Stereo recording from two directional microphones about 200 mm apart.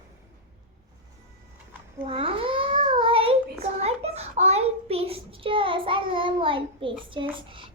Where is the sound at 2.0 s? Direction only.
30° right (ahead or behind).